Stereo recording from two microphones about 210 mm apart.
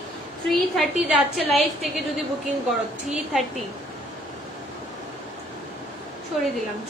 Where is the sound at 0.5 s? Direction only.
Centre (ahead or behind).